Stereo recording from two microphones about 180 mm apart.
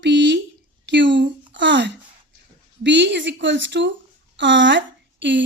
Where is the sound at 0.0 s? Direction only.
80° right.